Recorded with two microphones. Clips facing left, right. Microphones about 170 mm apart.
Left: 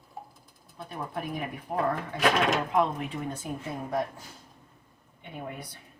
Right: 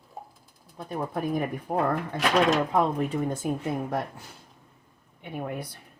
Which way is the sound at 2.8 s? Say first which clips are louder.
Right 3 dB; 40° right (ahead or behind).